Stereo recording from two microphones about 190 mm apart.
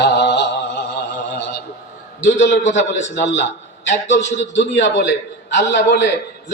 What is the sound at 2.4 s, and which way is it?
A man's voice, 65° left (ahead or behind).